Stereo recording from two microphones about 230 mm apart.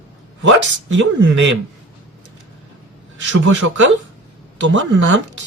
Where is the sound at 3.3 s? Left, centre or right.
Right.